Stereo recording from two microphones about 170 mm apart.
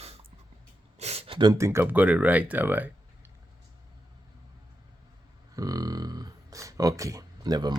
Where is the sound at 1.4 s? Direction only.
20° right (ahead or behind).